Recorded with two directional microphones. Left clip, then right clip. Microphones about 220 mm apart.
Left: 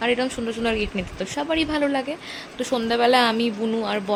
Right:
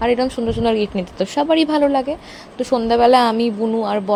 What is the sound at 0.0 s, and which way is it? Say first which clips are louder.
A woman's voice: right 5 dB; 15° right (ahead or behind).